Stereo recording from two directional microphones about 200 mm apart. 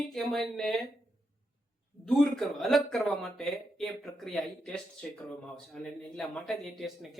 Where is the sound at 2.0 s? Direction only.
Centre (ahead or behind).